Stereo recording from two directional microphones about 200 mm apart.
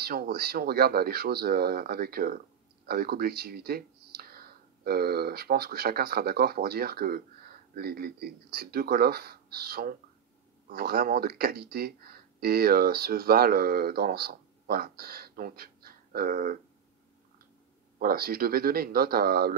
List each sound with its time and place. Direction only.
0.0 s speech: 50° right (ahead or behind)
17.9 s speech: 50° right (ahead or behind)